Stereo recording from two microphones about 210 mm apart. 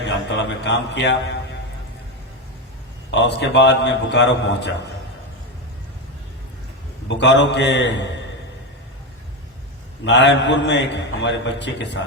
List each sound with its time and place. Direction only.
0.0 s a man's voice: 55° left (ahead or behind)
3.1 s a man's voice: 55° left (ahead or behind)
7.1 s a man's voice: 55° left (ahead or behind)
10.0 s a man's voice: 55° left (ahead or behind)